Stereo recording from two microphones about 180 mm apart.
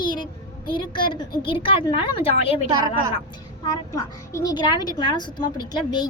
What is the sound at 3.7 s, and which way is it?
A woman's voice, 20° left (ahead or behind).